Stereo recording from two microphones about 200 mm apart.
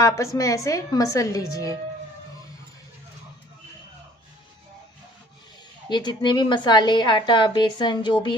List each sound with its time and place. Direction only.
0.0 s a woman's voice: 15° left (ahead or behind)
5.9 s a woman's voice: 20° left (ahead or behind)